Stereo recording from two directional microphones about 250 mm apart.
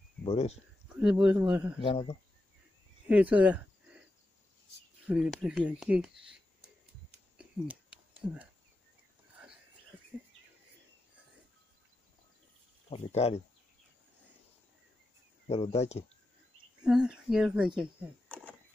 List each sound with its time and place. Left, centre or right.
0.2 s speech: left
0.9 s speech: centre
1.8 s speech: left
3.1 s cricket: centre
5.0 s speech: centre
7.3 s a sound: centre
12.9 s speech: left
15.4 s speech: left
16.8 s speech: centre